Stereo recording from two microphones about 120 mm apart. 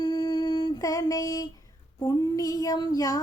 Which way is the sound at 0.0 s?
35° left (ahead or behind).